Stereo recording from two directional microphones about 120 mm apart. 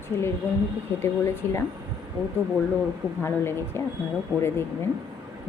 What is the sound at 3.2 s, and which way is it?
Speech, 20° left (ahead or behind).